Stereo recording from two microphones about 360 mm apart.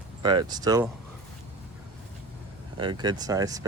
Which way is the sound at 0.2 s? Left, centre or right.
Centre.